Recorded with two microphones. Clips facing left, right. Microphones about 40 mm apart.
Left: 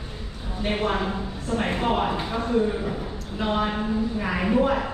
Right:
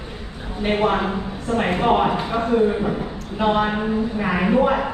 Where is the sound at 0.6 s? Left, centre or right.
Right.